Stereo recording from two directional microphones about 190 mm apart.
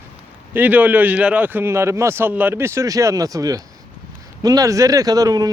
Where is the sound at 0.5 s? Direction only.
10° right (ahead or behind).